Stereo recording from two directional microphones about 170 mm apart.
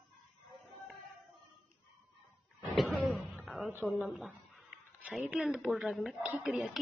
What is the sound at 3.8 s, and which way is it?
Speech, centre (ahead or behind).